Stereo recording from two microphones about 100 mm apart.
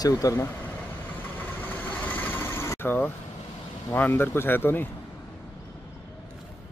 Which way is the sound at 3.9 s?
20° left (ahead or behind).